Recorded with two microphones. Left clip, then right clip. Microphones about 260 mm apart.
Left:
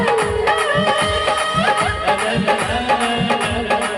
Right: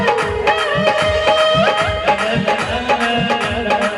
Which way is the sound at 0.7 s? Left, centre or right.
Left.